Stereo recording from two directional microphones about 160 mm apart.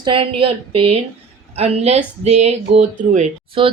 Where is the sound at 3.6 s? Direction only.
35° right (ahead or behind).